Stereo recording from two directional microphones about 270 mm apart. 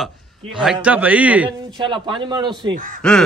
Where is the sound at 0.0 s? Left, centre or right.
Centre.